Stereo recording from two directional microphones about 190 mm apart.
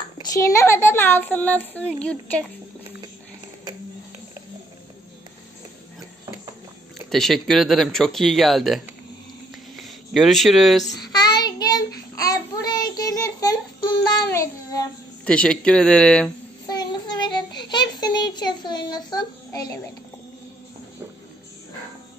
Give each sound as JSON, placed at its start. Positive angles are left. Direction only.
{"t": 0.2, "sound": "speech", "side_deg": 15}
{"t": 7.1, "sound": "speech", "side_deg": 0}
{"t": 10.9, "sound": "child singing", "side_deg": 20}
{"t": 15.2, "sound": "speech", "side_deg": 5}
{"t": 16.6, "sound": "child singing", "side_deg": 20}